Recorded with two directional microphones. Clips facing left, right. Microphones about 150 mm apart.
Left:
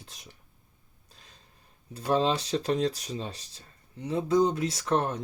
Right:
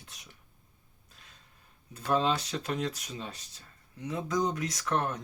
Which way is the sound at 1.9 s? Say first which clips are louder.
Left 2 dB; 30° left (ahead or behind).